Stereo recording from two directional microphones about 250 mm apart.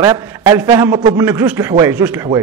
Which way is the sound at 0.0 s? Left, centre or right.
Centre.